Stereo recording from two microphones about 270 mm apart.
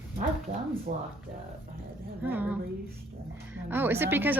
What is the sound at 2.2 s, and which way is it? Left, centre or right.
Speech, centre.